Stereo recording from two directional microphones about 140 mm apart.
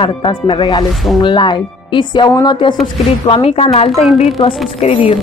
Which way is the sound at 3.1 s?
45° left (ahead or behind).